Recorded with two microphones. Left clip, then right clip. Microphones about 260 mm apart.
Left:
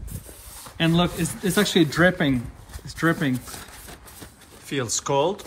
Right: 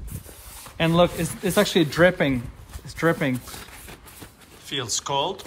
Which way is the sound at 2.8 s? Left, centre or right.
Right.